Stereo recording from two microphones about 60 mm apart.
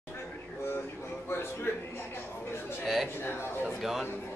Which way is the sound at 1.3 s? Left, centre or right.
Left.